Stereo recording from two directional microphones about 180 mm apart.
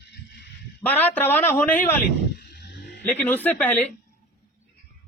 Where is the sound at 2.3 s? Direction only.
70° left (ahead or behind).